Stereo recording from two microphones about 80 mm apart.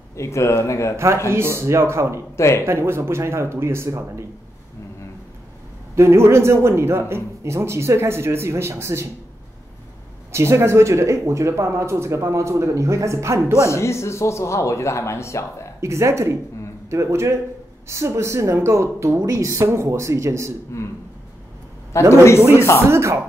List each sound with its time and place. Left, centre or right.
0.1 s speech: left
0.9 s speech: right
2.3 s speech: left
2.6 s speech: right
5.9 s speech: right
10.3 s speech: right
13.7 s speech: left
15.8 s speech: right
22.1 s speech: left
22.4 s speech: right